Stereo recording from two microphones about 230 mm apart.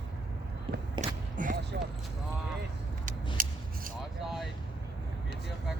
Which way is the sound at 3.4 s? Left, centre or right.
Right.